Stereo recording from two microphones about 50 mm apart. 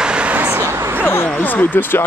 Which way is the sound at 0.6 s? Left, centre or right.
Right.